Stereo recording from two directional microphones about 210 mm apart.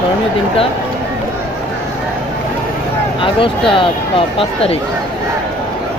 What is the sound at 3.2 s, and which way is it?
Speech, 25° left (ahead or behind).